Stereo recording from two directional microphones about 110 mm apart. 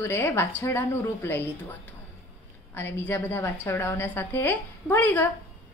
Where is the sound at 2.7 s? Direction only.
20° left (ahead or behind).